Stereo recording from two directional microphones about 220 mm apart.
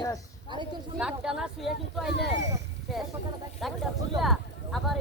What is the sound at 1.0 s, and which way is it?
Speech, centre (ahead or behind).